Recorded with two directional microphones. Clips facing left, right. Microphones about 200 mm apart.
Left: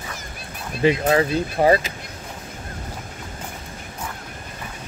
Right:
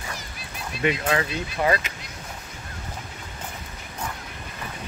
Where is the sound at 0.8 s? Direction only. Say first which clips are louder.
Left 6 dB; 35° left (ahead or behind).